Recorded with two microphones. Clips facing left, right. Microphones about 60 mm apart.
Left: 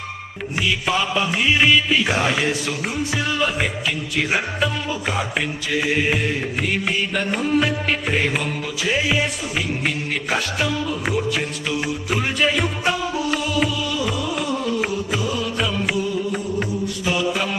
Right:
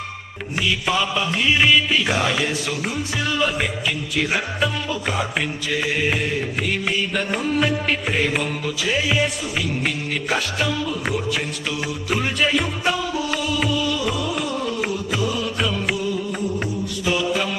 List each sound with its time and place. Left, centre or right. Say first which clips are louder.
0.9 s music: left 1 dB; centre
2.6 s music: even; centre
3.2 s music: right 1 dB; centre
8.8 s music: left 1 dB; centre
11.7 s music: left 4 dB; left
12.0 s music: even; centre
17.1 s mantra: right 1 dB; centre